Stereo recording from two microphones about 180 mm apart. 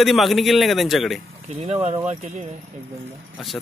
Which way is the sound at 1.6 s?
35° right (ahead or behind).